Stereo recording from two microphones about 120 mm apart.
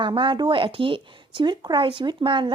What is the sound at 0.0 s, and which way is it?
Speech, 40° right (ahead or behind).